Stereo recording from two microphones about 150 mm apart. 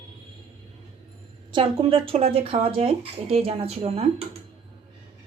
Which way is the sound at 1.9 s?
35° right (ahead or behind).